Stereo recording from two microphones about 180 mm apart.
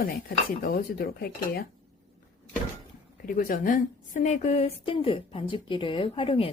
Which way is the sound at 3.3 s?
50° left (ahead or behind).